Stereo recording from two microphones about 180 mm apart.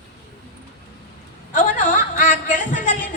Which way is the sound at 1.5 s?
45° left (ahead or behind).